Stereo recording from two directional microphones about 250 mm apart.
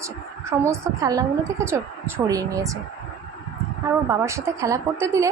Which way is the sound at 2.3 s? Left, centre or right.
Centre.